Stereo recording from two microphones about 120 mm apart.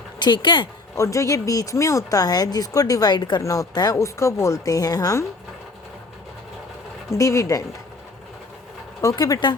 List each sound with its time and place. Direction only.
0.2 s speech: 40° left (ahead or behind)
0.9 s speech: 25° left (ahead or behind)
7.1 s speech: 25° left (ahead or behind)
9.0 s speech: 30° left (ahead or behind)